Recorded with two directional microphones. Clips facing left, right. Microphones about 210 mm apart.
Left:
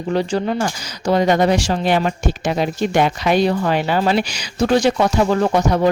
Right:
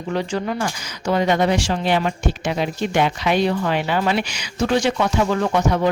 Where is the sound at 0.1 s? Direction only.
35° left (ahead or behind).